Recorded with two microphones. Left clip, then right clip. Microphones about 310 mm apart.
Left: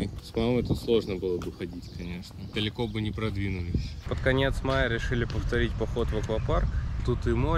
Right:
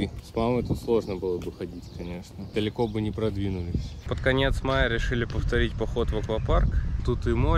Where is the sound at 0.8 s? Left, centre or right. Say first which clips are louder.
Right 1 dB; centre.